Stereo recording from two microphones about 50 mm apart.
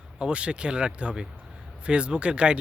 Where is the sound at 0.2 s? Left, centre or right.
Right.